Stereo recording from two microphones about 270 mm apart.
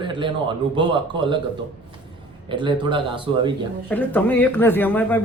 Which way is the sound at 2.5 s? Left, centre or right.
Centre.